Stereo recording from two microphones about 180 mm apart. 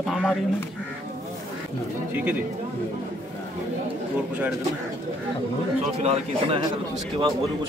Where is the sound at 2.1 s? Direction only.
10° right (ahead or behind).